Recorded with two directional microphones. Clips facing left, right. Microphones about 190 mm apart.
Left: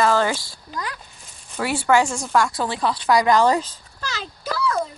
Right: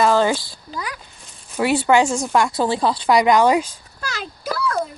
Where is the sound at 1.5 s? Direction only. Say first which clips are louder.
Right 3 dB; 20° right (ahead or behind).